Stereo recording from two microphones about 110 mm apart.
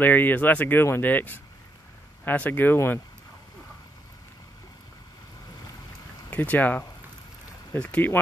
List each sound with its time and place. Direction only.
0.0 s speech: 15° left (ahead or behind)
6.3 s speech: 15° left (ahead or behind)